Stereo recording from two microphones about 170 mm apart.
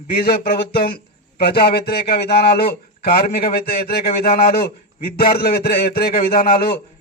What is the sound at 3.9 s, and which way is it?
A man's voice, 65° left (ahead or behind).